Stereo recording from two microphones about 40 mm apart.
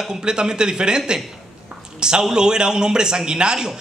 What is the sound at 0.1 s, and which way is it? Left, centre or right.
A man's voice, right.